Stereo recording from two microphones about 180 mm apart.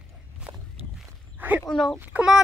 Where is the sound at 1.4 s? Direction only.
10° right (ahead or behind).